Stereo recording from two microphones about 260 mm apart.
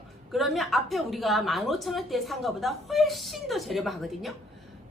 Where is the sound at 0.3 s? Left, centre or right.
Centre.